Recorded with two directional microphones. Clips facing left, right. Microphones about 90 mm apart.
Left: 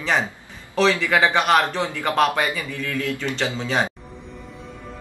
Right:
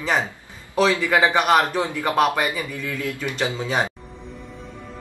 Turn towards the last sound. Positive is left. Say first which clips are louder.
# even
turn(degrees=-15)  # may be behind; listen again after turning